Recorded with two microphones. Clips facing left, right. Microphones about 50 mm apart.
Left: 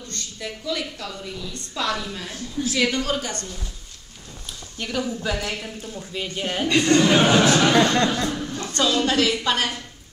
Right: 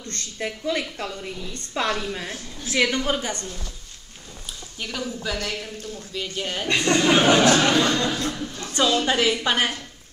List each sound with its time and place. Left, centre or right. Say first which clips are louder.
0.1 s a woman's voice: right 4 dB; right
4.7 s speech: left 4 dB; centre
6.7 s a woman's voice: left 2 dB; centre
7.7 s speech: left 3 dB; left
8.3 s chuckle: left 2 dB; centre
8.7 s a woman's voice: even; centre